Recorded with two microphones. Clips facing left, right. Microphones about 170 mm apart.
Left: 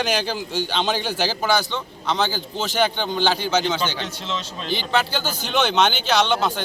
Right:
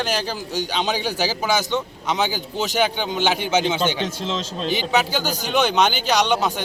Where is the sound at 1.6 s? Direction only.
20° right (ahead or behind).